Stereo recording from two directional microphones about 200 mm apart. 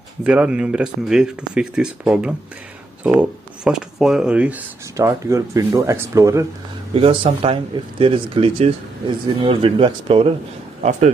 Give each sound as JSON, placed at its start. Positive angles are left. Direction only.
{"t": 0.2, "sound": "speech", "side_deg": -5}
{"t": 6.9, "sound": "speech", "side_deg": -25}
{"t": 10.8, "sound": "speech", "side_deg": -35}